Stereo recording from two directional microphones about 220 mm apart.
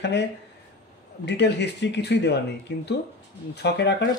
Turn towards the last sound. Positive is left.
turn(degrees=50)  # may be behind; listen again after turning